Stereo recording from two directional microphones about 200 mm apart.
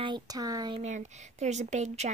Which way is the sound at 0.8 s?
35° right (ahead or behind).